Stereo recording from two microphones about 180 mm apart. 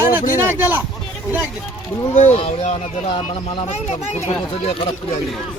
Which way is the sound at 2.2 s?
40° left (ahead or behind).